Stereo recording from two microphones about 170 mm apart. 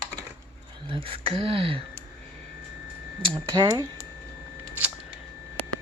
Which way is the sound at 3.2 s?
30° right (ahead or behind).